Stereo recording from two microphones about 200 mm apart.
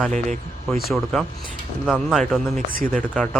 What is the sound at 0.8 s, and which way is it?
Speech, centre (ahead or behind).